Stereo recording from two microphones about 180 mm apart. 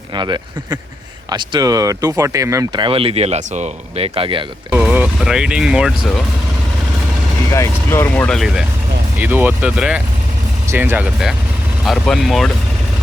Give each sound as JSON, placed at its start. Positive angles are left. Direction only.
{"t": 0.2, "sound": "speech", "side_deg": -25}
{"t": 4.7, "sound": "speech", "side_deg": -10}
{"t": 7.5, "sound": "speech", "side_deg": 15}